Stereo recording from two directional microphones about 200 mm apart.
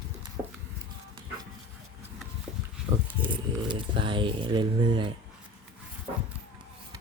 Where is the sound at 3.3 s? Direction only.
25° right (ahead or behind).